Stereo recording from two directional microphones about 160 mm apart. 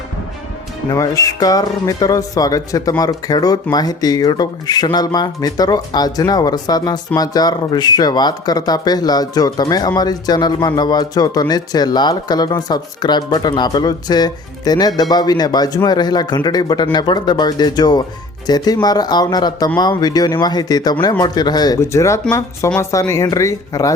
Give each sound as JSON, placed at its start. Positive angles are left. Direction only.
{"t": 0.9, "sound": "speech", "side_deg": 20}